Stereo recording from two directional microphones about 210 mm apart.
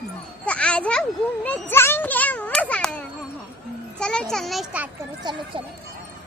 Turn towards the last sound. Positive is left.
turn(degrees=-20)  # may be behind; listen again after turning